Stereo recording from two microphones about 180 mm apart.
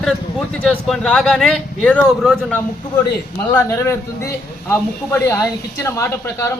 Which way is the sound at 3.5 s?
15° left (ahead or behind).